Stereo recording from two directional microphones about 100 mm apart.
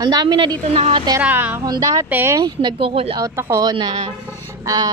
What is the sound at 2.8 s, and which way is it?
Speech, 70° right (ahead or behind).